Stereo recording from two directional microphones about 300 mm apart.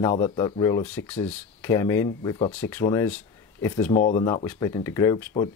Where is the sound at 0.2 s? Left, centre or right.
Centre.